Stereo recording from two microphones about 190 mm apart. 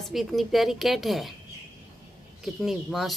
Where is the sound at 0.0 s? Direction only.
Centre (ahead or behind).